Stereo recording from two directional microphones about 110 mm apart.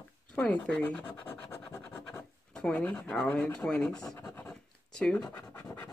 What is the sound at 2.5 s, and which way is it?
Speech, 10° left (ahead or behind).